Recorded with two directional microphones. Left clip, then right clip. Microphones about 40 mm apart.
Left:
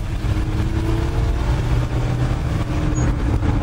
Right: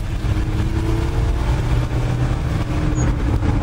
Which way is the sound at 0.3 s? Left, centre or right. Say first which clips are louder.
Even; right.